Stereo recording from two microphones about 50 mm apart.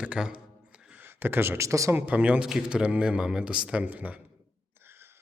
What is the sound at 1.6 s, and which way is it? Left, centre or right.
Speech, right.